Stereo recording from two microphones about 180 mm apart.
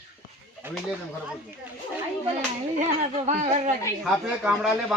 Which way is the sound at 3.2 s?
40° right (ahead or behind).